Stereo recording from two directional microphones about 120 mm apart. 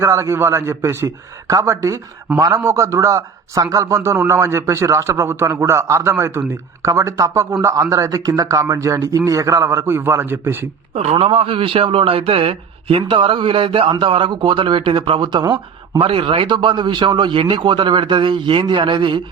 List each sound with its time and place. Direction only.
0.0 s a man's voice: 25° right (ahead or behind)
10.9 s speech: 60° right (ahead or behind); by 16.0 s 35° right (ahead or behind)
16.0 s speech: 50° right (ahead or behind)